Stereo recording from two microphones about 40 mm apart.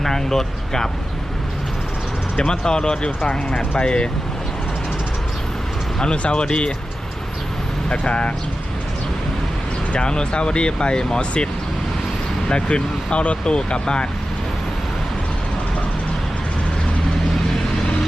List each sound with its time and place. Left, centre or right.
0.0 s speech: centre
2.3 s speech: centre
6.0 s speech: left
7.9 s speech: left
9.9 s speech: left
12.5 s speech: left